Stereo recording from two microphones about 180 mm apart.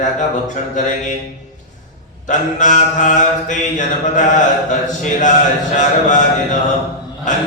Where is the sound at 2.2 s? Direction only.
45° left (ahead or behind).